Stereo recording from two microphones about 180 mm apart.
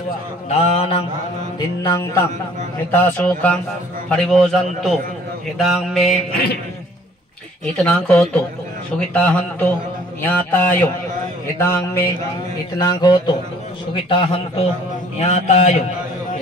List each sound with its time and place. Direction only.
0.5 s a man's voice: 35° left (ahead or behind)
1.8 s a man's voice: 15° left (ahead or behind); by 6.1 s centre (ahead or behind)
7.8 s a man's voice: 5° left (ahead or behind); by 15.7 s 40° left (ahead or behind)